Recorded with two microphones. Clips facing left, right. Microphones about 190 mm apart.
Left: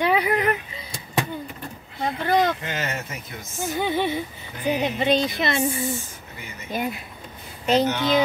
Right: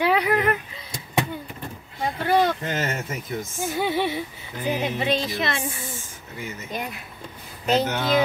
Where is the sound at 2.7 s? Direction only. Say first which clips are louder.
Right 2 dB; 45° right (ahead or behind).